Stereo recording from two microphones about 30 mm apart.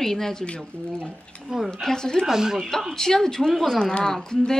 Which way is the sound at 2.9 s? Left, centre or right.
Centre.